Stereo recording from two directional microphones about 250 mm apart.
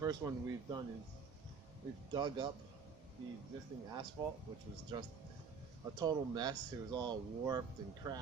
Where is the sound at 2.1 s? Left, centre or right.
Centre.